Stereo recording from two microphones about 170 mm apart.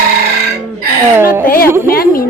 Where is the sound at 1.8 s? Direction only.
60° left (ahead or behind).